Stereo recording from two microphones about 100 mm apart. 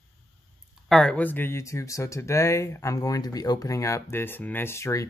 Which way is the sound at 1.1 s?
20° left (ahead or behind).